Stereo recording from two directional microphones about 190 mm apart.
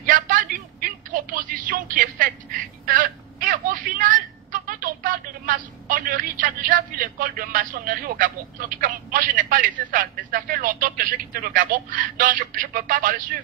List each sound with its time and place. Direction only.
0.0 s telephone: 45° right (ahead or behind)
2.8 s a woman's voice: 45° right (ahead or behind)